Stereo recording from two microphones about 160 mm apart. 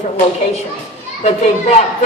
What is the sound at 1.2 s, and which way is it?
Speech, 40° left (ahead or behind).